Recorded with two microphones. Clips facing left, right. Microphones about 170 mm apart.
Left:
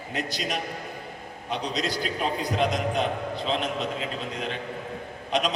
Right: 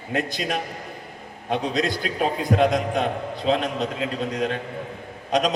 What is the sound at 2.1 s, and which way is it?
Speech, centre (ahead or behind).